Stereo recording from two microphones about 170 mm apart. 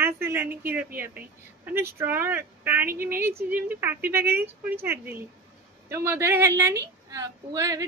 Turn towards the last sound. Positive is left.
turn(degrees=-20)  # may be behind; listen again after turning